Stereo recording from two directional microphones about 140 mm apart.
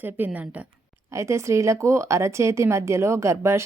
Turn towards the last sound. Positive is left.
turn(degrees=-20)  # may be behind; listen again after turning